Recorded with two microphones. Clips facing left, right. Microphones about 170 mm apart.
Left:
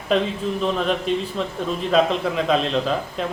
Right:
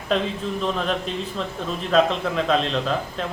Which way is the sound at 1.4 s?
5° left (ahead or behind).